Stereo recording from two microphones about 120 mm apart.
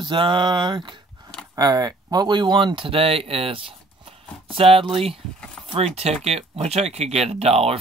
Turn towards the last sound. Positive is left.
turn(degrees=-60)  # may be behind; listen again after turning